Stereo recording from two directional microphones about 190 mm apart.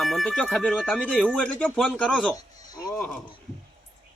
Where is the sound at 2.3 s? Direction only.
20° left (ahead or behind).